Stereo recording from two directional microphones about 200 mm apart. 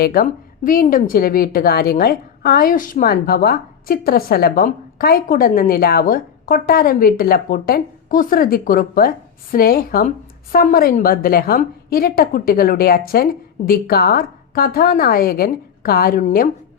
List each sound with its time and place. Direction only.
0.0 s a woman's voice: 45° left (ahead or behind)